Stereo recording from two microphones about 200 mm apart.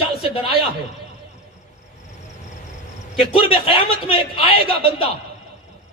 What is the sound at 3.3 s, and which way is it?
A man's voice, 25° left (ahead or behind).